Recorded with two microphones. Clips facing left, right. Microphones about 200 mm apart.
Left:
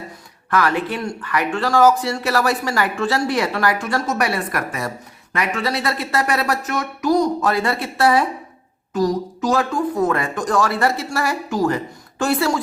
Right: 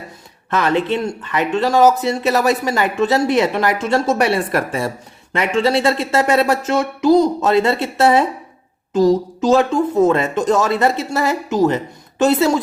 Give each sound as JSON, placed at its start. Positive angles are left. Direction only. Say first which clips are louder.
{"t": 0.5, "sound": "speech", "louder": "right 3 dB", "side_deg": -25}